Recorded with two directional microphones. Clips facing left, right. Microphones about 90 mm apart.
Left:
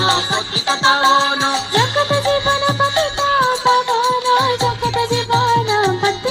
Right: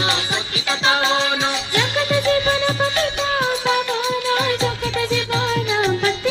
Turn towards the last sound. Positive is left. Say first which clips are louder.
# left 3 dB
turn(degrees=25)  # may be behind; listen again after turning